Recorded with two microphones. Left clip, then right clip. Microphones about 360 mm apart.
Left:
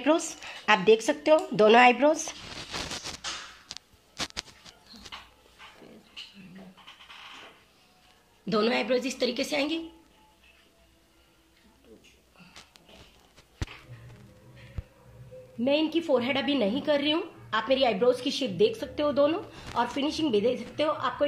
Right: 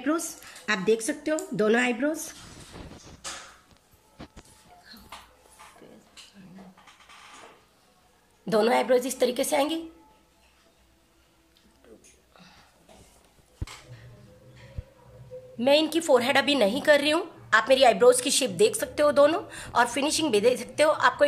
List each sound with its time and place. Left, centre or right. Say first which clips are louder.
0.0 s speech: left 3 dB; centre
2.7 s vehicle: left 11 dB; left
3.6 s a sound: left 13 dB; left
8.5 s a woman's voice: right 4 dB; right
15.6 s a woman's voice: right 4 dB; right